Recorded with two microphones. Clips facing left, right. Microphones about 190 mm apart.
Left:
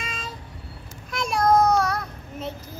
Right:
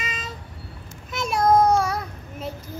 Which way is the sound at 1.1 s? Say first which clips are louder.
Right 1 dB; 5° right (ahead or behind).